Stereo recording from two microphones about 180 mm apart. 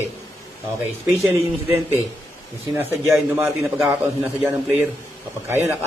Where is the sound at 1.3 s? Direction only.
15° right (ahead or behind).